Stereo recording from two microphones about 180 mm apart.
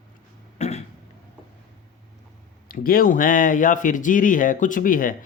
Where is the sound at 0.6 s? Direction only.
40° left (ahead or behind).